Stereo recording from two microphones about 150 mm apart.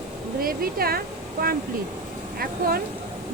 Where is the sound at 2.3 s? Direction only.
85° right.